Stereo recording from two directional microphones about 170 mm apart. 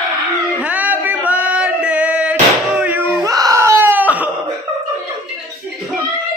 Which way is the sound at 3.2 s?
20° right (ahead or behind).